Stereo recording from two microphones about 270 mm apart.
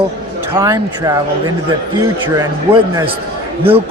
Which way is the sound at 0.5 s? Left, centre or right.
Centre.